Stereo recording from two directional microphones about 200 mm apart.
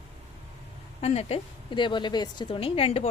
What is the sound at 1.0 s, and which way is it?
A woman's voice, 30° left (ahead or behind).